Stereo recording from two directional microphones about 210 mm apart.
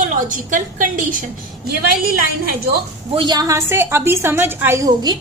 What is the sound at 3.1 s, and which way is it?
A woman's voice, 20° right (ahead or behind).